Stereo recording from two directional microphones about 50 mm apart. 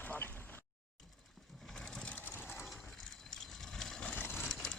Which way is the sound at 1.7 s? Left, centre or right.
Centre.